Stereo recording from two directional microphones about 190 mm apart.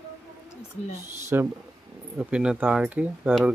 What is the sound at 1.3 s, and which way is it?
Speech, 10° right (ahead or behind).